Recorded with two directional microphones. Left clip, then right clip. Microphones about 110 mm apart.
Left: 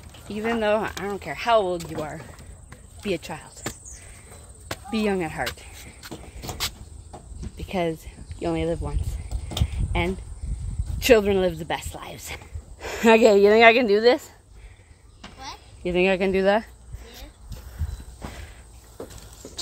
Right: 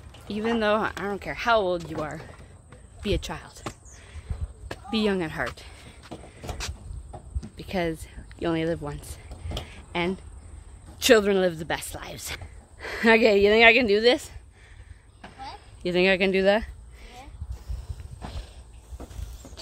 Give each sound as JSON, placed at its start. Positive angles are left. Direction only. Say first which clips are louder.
{"t": 0.3, "sound": "speech", "louder": "left 1 dB", "side_deg": -35}
{"t": 4.8, "sound": "speech", "louder": "left 1 dB", "side_deg": -35}
{"t": 7.3, "sound": "cricket", "louder": "left 2 dB", "side_deg": -10}
{"t": 8.4, "sound": "speech", "louder": "left 1 dB", "side_deg": -40}
{"t": 9.7, "sound": "a sound", "louder": "even", "side_deg": -30}
{"t": 11.0, "sound": "speech", "louder": "left 1 dB", "side_deg": -25}
{"t": 12.7, "sound": "a woman's voice", "louder": "left 2 dB", "side_deg": 20}
{"t": 13.8, "sound": "speech", "louder": "left 2 dB", "side_deg": -50}
{"t": 15.8, "sound": "speech", "louder": "even", "side_deg": -30}
{"t": 16.3, "sound": "speech", "louder": "left 1 dB", "side_deg": -50}